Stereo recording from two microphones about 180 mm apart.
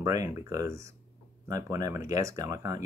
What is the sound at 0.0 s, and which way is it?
Speech, 20° right (ahead or behind).